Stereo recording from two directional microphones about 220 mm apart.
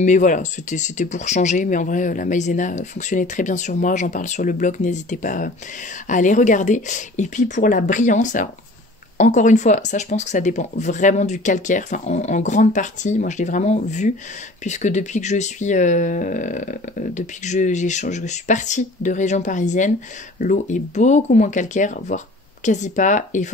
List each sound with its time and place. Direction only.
0.0 s speech: 35° left (ahead or behind)